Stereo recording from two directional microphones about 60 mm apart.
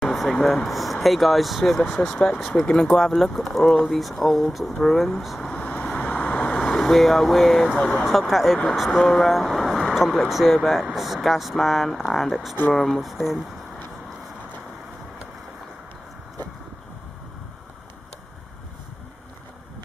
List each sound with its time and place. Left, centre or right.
0.0 s vehicle: centre
0.7 s speech: centre
5.6 s vehicle: left
6.8 s speech: centre